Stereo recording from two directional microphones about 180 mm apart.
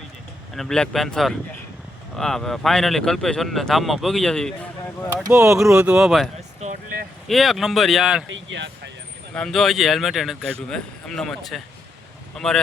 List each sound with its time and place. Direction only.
0.5 s speech: 5° left (ahead or behind)
5.3 s speech: 15° right (ahead or behind)
5.5 s speech: 5° right (ahead or behind)
6.6 s vehicle: 45° right (ahead or behind)
7.3 s speech: centre (ahead or behind)
8.3 s speech: 90° right
9.3 s speech: centre (ahead or behind)